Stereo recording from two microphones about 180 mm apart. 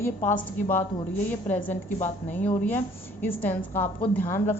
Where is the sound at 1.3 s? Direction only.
10° left (ahead or behind).